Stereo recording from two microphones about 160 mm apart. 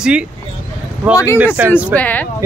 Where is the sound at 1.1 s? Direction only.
20° left (ahead or behind).